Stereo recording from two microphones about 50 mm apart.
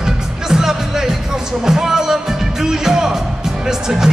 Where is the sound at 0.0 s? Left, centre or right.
Centre.